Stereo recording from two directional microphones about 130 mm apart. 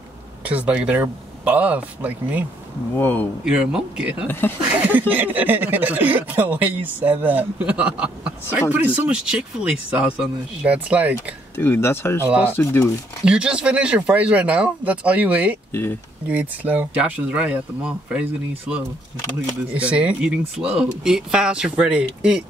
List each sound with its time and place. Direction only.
0.5 s speech: 10° right (ahead or behind)
3.0 s speech: 15° left (ahead or behind)
3.4 s speech: 5° right (ahead or behind)
4.3 s speech: 15° left (ahead or behind)
4.6 s speech: 15° right (ahead or behind)
11.5 s speech: 20° left (ahead or behind)
12.3 s speech: 10° right (ahead or behind)
12.5 s speech: 20° left (ahead or behind)
13.2 s speech: 5° right (ahead or behind)